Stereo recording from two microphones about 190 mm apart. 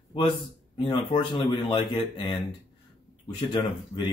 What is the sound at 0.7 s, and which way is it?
Speech, 25° left (ahead or behind).